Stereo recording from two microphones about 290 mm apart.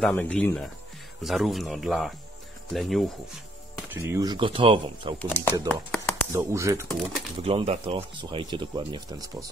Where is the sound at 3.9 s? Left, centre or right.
Centre.